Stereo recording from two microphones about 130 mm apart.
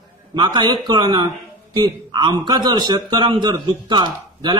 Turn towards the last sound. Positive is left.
turn(degrees=-35)  # may be behind; listen again after turning